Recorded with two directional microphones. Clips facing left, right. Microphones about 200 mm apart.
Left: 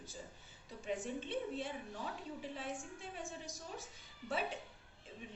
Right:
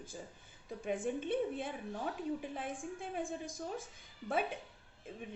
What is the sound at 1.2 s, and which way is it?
A woman's voice, 55° right (ahead or behind).